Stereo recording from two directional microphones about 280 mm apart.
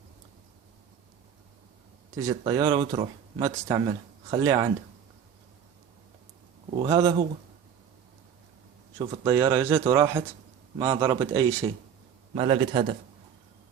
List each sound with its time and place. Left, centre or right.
2.1 s speech: centre
6.7 s speech: centre
9.0 s a man's voice: centre